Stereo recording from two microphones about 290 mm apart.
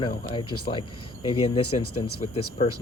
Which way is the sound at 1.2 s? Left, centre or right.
Left.